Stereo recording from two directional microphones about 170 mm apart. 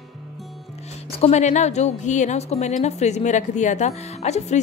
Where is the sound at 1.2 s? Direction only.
45° left (ahead or behind).